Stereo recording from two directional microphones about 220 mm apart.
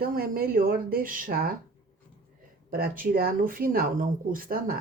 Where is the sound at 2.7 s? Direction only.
40° right (ahead or behind).